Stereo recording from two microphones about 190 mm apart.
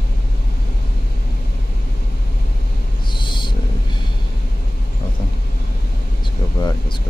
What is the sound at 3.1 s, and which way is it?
Owl, 25° left (ahead or behind).